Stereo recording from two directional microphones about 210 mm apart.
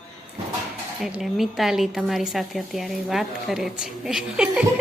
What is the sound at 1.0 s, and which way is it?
A woman's voice, centre (ahead or behind).